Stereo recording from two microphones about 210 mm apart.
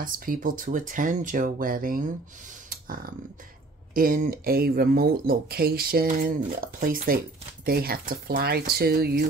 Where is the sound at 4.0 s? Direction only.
45° right (ahead or behind).